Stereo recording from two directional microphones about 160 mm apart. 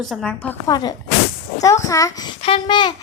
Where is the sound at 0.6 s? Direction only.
25° left (ahead or behind).